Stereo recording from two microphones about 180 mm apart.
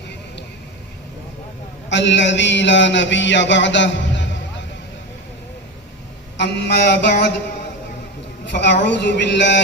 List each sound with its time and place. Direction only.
1.9 s a man's voice: 85° left
6.3 s speech: 70° left (ahead or behind)
8.4 s speech: 70° left (ahead or behind)